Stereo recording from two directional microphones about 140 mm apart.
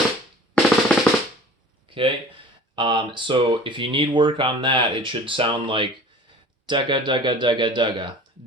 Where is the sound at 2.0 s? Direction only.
40° right (ahead or behind).